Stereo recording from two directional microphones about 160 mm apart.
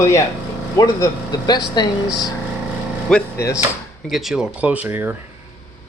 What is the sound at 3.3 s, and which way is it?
Speech, 20° left (ahead or behind).